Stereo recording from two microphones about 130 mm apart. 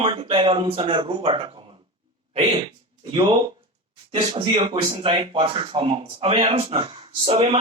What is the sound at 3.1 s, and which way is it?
Speech, 35° right (ahead or behind).